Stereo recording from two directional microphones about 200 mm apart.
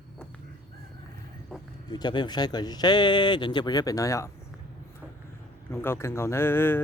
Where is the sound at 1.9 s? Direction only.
20° left (ahead or behind).